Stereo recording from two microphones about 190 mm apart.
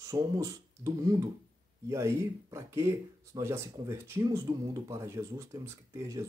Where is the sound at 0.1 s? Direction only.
15° right (ahead or behind).